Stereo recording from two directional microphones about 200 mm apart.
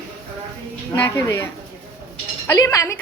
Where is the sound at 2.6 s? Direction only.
15° left (ahead or behind).